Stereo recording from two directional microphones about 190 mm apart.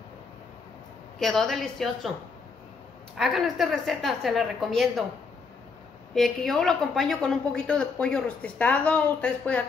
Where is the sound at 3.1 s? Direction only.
Centre (ahead or behind).